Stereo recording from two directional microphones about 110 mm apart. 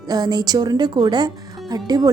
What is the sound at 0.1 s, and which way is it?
A woman's voice, 40° right (ahead or behind).